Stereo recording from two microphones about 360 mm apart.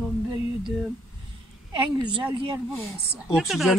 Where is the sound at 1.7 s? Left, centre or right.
Centre.